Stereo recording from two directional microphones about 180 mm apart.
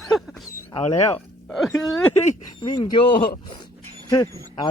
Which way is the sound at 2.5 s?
25° left (ahead or behind).